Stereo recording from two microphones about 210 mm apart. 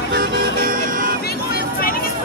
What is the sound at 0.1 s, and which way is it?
Music, 45° right (ahead or behind).